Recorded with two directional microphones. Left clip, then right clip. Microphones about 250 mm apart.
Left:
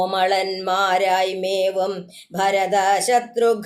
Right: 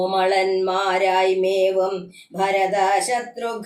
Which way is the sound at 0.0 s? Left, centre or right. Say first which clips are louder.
Even; left.